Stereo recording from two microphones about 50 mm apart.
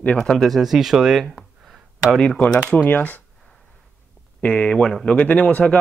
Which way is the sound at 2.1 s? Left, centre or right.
Centre.